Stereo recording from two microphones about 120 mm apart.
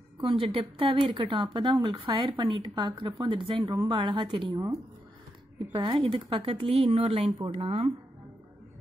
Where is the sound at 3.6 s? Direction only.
25° right (ahead or behind).